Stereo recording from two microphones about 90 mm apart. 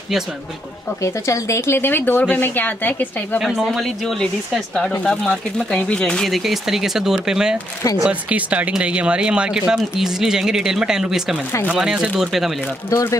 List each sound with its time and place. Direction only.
1.0 s speech: 35° left (ahead or behind)
3.3 s speech: centre (ahead or behind)
12.9 s speech: 35° left (ahead or behind)